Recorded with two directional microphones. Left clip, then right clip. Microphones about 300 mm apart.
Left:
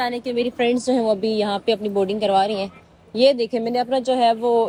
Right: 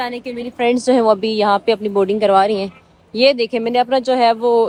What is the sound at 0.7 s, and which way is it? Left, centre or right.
Speech, right.